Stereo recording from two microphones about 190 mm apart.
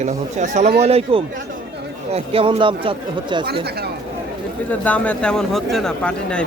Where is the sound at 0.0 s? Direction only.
40° right (ahead or behind).